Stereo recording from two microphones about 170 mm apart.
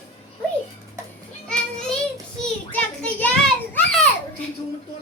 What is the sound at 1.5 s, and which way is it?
Children playing, 5° left (ahead or behind).